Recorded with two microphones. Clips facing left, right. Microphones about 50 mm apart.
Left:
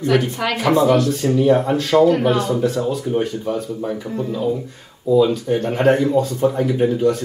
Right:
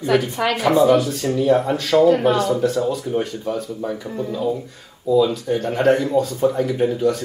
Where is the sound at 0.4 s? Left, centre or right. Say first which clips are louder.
Even; centre.